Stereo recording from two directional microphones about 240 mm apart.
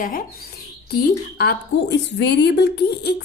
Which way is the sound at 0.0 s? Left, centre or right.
Left.